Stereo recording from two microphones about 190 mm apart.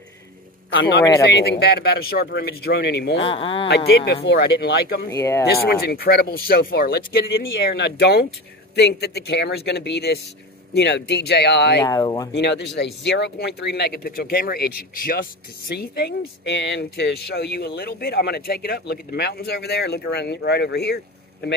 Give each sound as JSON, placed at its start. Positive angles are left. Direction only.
{"t": 0.7, "sound": "speech", "side_deg": 60}
{"t": 3.2, "sound": "speech", "side_deg": 30}
{"t": 3.6, "sound": "speech", "side_deg": 60}
{"t": 5.1, "sound": "speech", "side_deg": 15}
{"t": 5.5, "sound": "speech", "side_deg": 55}
{"t": 11.8, "sound": "speech", "side_deg": 20}
{"t": 12.4, "sound": "speech", "side_deg": 65}